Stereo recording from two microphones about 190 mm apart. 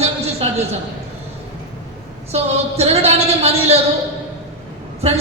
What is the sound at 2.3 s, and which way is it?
A man's voice, 35° right (ahead or behind).